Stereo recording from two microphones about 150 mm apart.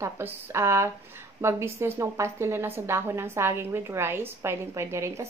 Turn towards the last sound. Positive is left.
turn(degrees=-20)  # may be behind; listen again after turning